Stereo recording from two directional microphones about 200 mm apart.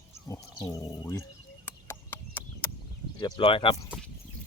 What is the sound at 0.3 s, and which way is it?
Speech, 15° left (ahead or behind).